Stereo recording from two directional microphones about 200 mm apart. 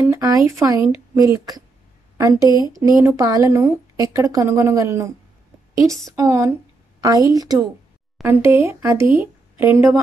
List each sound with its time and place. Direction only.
0.0 s a woman's voice: 15° right (ahead or behind)